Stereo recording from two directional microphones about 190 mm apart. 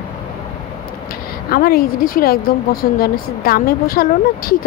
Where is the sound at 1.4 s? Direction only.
50° left (ahead or behind).